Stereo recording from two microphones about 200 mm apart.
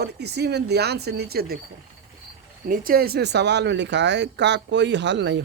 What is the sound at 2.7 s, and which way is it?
Speech, 45° right (ahead or behind).